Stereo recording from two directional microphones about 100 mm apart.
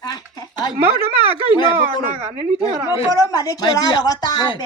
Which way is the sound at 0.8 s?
80° right.